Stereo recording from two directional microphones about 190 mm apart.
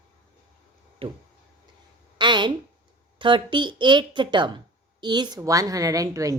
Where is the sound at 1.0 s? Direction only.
30° right (ahead or behind).